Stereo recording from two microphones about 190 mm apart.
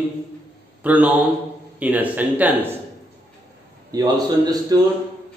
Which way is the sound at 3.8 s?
20° right (ahead or behind).